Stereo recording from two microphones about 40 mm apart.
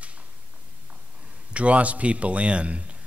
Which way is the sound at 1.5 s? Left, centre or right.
Right.